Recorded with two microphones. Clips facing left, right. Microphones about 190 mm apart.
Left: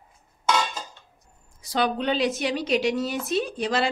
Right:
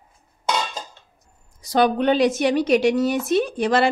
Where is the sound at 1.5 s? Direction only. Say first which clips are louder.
Right 6 dB; 50° right (ahead or behind).